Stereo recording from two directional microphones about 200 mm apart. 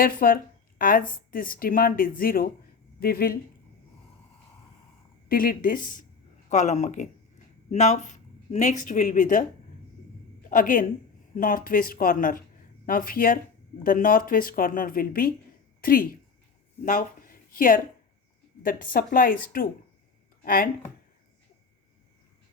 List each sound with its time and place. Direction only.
0.0 s speech: 45° left (ahead or behind)
5.3 s speech: 45° left (ahead or behind)
10.5 s speech: 40° left (ahead or behind)